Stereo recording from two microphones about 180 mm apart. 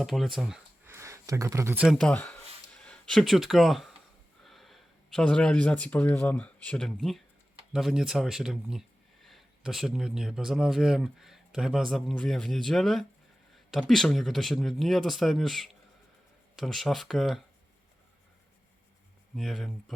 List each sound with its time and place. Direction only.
0.0 s speech: centre (ahead or behind)
0.9 s speech: 15° right (ahead or behind)
2.0 s speech: 5° left (ahead or behind)
19.4 s speech: centre (ahead or behind)